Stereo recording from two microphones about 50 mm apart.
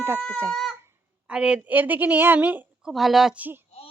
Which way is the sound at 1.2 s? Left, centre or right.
Centre.